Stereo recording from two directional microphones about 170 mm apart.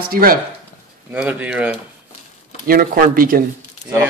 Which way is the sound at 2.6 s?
55° right (ahead or behind).